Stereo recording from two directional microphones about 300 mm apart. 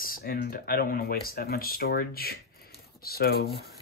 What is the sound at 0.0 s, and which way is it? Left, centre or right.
Speech, left.